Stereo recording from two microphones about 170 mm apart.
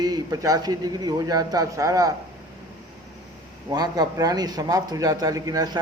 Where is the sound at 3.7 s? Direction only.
25° right (ahead or behind).